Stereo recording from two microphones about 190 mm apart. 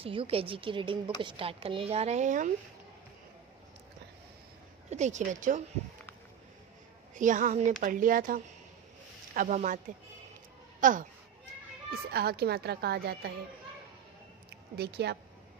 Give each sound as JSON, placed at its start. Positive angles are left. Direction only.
{"t": 0.0, "sound": "speech", "side_deg": -30}
{"t": 4.8, "sound": "speech", "side_deg": -35}
{"t": 7.2, "sound": "speech", "side_deg": -40}
{"t": 12.1, "sound": "speech", "side_deg": -55}
{"t": 14.5, "sound": "speech", "side_deg": -60}